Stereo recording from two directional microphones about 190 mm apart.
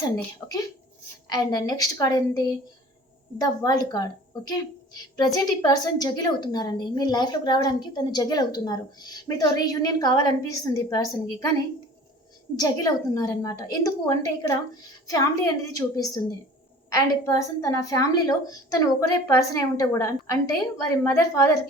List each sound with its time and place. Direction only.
1.3 s a woman's voice: 20° left (ahead or behind)
3.4 s a woman's voice: 20° left (ahead or behind)
12.5 s a woman's voice: 20° left (ahead or behind)